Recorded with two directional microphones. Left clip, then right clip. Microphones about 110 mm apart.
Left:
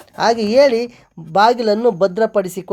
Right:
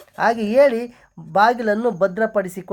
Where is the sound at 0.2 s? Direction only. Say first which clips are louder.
Left 3 dB; 55° left (ahead or behind).